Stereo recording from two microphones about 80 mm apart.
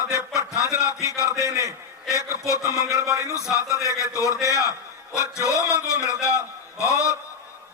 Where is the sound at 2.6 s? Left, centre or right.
Right.